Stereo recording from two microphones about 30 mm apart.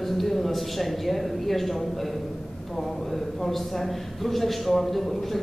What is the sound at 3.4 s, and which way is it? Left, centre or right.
A man's voice, centre.